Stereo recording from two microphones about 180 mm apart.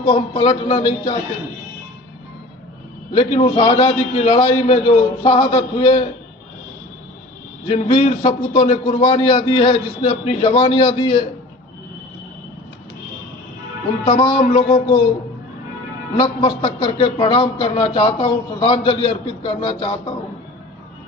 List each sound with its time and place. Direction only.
0.0 s speech: 30° left (ahead or behind)
3.1 s speech: 30° left (ahead or behind)
7.7 s speech: 35° left (ahead or behind)
14.3 s speech: 30° left (ahead or behind)
16.1 s speech: 30° left (ahead or behind)